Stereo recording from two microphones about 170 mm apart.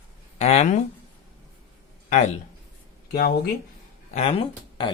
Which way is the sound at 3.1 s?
65° left (ahead or behind).